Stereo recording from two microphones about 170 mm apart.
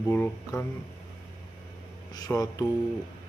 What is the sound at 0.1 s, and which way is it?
Speech, 15° left (ahead or behind).